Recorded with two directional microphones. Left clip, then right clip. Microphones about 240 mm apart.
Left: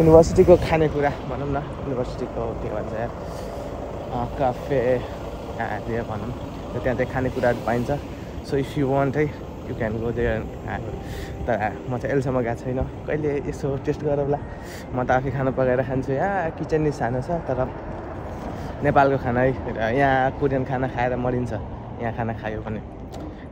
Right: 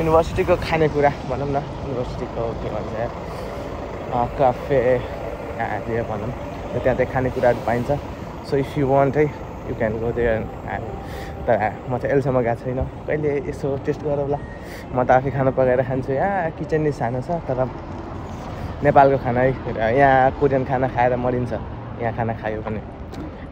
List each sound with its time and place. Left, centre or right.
0.0 s speech: left
0.7 s speech: centre
4.4 s speech: centre
15.0 s speech: centre
18.9 s speech: centre